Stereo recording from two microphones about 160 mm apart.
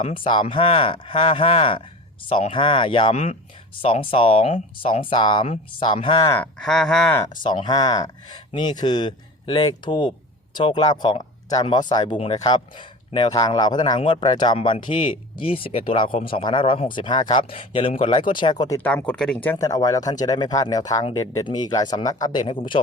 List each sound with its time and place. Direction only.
0.1 s speech: 30° left (ahead or behind)
6.2 s speech: 15° left (ahead or behind)
6.6 s speech: 5° left (ahead or behind)
7.4 s speech: 25° left (ahead or behind)
18.8 s speech: 10° left (ahead or behind); by 22.8 s 30° left (ahead or behind)